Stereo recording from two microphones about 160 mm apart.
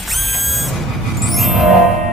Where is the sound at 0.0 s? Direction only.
Centre (ahead or behind).